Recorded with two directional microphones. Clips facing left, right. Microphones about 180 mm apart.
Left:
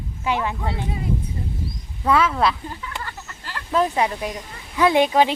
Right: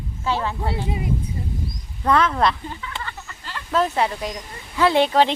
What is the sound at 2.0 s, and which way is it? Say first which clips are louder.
Speech: even; 5° left (ahead or behind).